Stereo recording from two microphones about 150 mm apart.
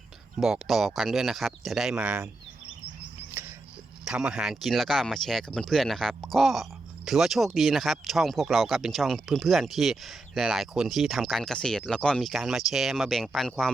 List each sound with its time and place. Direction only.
0.3 s speech: 5° right (ahead or behind)
4.0 s speech: 5° right (ahead or behind)